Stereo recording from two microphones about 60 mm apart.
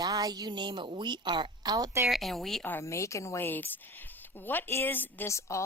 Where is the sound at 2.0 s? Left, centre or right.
Centre.